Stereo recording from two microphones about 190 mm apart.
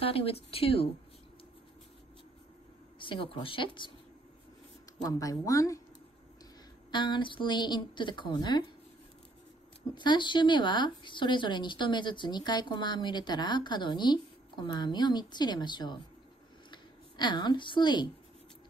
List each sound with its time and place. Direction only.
0.0 s speech: 30° left (ahead or behind)
3.0 s speech: 25° left (ahead or behind)
5.0 s speech: 20° left (ahead or behind)
6.9 s speech: 25° left (ahead or behind)
9.9 s speech: 25° left (ahead or behind)